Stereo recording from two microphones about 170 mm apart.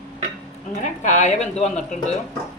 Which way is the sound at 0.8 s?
45° left (ahead or behind).